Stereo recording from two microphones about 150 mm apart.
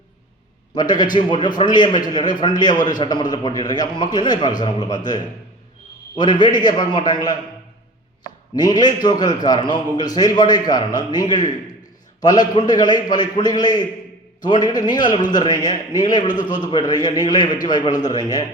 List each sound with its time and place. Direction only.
0.7 s a man's voice: 30° left (ahead or behind)
6.1 s a man's voice: 30° left (ahead or behind)
8.5 s a man's voice: 25° left (ahead or behind)